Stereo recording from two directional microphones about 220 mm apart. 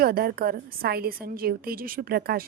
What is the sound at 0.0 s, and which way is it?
Speech, 40° right (ahead or behind).